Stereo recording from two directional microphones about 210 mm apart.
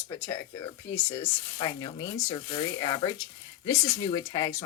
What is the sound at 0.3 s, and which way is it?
Speech, 10° left (ahead or behind).